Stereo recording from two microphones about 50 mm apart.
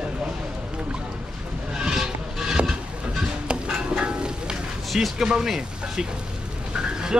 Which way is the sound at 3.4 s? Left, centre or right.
Centre.